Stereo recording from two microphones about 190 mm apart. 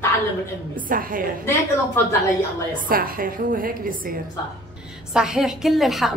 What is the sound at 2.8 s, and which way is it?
A woman's voice, 50° right (ahead or behind).